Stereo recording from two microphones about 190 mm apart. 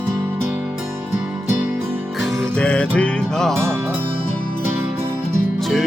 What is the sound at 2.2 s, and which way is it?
Music, centre (ahead or behind).